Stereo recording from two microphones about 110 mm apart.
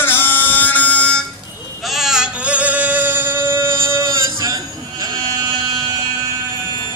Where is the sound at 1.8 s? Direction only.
Centre (ahead or behind); by 5.5 s 35° right (ahead or behind).